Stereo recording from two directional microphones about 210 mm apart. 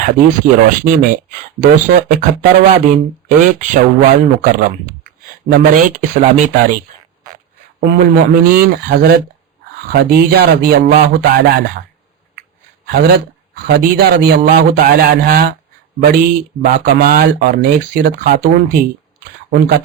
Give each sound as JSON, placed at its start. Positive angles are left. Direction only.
{"t": 0.0, "sound": "speech", "side_deg": -40}
{"t": 7.8, "sound": "speech", "side_deg": -45}
{"t": 12.9, "sound": "speech", "side_deg": -45}
{"t": 16.7, "sound": "speech", "side_deg": -40}